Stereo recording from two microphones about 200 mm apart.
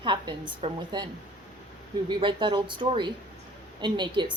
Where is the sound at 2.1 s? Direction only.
25° right (ahead or behind).